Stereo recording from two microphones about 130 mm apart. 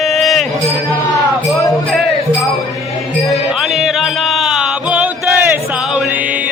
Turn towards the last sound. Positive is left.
turn(degrees=-5)  # may be behind; listen again after turning